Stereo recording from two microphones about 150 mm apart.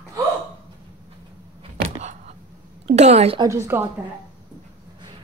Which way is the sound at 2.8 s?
45° right (ahead or behind).